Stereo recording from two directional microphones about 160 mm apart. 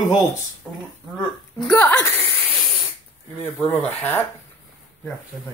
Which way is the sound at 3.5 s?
10° left (ahead or behind).